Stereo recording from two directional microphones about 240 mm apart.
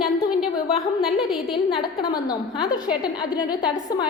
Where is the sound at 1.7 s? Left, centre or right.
Centre.